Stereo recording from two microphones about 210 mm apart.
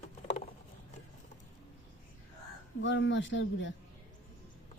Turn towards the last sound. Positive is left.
turn(degrees=60)  # may be behind; listen again after turning